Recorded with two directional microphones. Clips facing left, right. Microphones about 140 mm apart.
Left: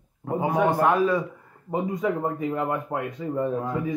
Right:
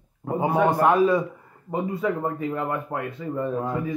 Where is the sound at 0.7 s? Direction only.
20° right (ahead or behind).